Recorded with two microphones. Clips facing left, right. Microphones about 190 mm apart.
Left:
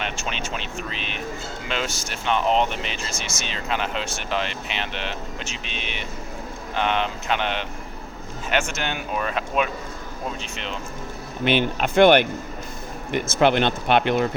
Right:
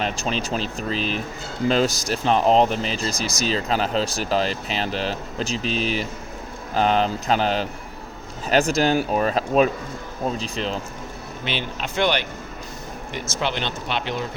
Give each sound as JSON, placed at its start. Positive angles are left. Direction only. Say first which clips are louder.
{"t": 0.0, "sound": "speech", "louder": "right 5 dB", "side_deg": -35}
{"t": 11.4, "sound": "speech", "louder": "left 8 dB", "side_deg": 55}